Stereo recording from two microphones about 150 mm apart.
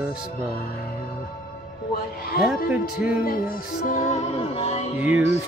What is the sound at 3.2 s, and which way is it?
Music, 75° left (ahead or behind).